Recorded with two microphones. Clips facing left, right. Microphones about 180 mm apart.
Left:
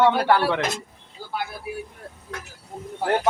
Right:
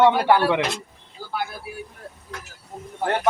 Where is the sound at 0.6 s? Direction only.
45° left (ahead or behind).